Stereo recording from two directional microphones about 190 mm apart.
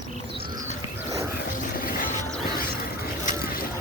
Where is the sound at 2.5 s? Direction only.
50° left (ahead or behind).